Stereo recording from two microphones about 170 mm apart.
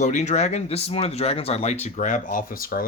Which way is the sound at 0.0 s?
45° left (ahead or behind).